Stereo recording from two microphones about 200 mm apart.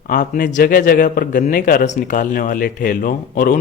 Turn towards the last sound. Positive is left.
turn(degrees=45)  # may be behind; listen again after turning